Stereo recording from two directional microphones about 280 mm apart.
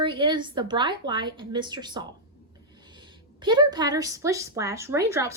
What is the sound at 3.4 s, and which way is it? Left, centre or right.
A woman's voice, centre.